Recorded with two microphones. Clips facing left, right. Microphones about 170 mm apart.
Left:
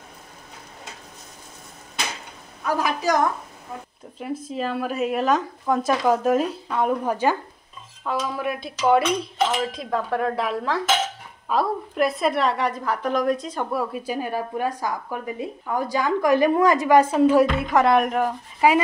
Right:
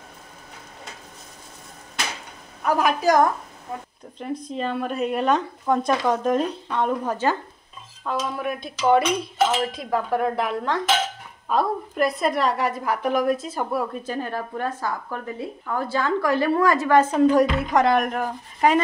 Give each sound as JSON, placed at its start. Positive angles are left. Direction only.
{"t": 2.6, "sound": "a woman's voice", "side_deg": -55}
{"t": 4.2, "sound": "a woman's voice", "side_deg": 5}
{"t": 14.0, "sound": "speech", "side_deg": 10}